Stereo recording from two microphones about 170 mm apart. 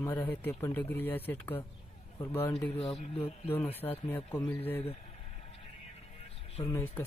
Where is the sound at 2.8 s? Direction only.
35° left (ahead or behind).